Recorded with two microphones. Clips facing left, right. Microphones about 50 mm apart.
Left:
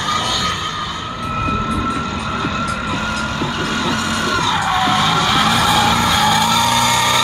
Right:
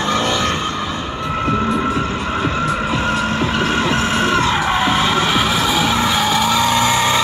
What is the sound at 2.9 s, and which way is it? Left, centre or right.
Vehicle, right.